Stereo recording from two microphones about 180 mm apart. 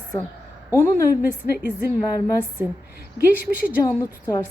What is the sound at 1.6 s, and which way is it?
Speech, 10° right (ahead or behind).